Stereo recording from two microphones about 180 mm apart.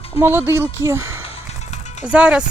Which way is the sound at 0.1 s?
10° right (ahead or behind).